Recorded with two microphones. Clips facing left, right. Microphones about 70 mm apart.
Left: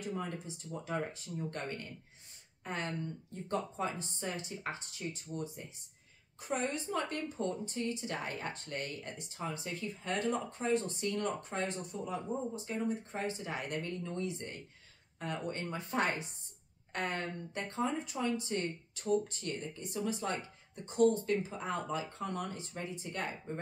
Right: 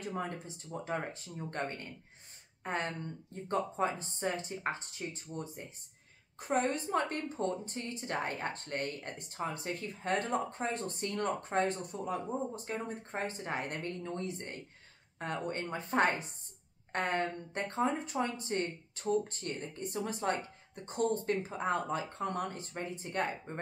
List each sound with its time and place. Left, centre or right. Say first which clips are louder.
0.1 s speech: right 1 dB; right